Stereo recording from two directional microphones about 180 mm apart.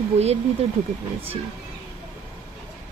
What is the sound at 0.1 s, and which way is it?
Speech, 35° right (ahead or behind).